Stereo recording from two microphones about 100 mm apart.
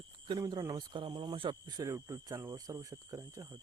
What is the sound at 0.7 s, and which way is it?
Speech, 50° right (ahead or behind).